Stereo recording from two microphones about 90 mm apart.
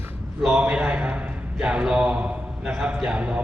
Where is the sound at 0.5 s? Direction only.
10° right (ahead or behind).